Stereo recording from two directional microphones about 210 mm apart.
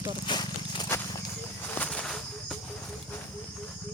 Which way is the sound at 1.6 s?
5° left (ahead or behind).